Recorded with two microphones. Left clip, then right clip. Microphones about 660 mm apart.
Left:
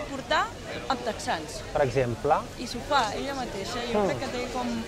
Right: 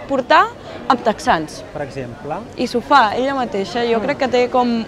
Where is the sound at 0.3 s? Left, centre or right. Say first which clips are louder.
Right 13 dB; right.